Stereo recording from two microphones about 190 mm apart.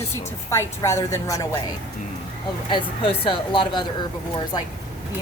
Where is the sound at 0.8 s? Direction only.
15° left (ahead or behind).